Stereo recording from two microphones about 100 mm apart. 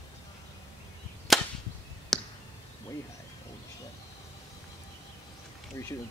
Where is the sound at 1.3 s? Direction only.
Centre (ahead or behind).